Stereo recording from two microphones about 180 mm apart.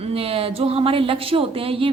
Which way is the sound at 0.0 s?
35° right (ahead or behind).